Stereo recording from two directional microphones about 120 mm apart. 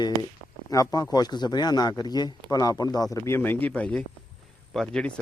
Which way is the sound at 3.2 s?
20° left (ahead or behind).